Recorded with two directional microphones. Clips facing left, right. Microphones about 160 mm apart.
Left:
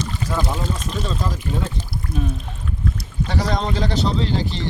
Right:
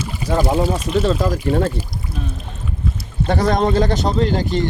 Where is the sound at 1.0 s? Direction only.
70° right (ahead or behind).